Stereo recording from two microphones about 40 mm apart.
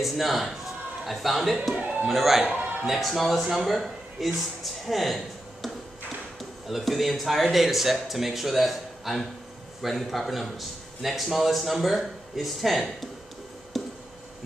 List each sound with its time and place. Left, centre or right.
0.0 s speech: centre
1.8 s a man's voice: right
2.0 s speech: centre
6.7 s speech: centre
13.7 s a sound: centre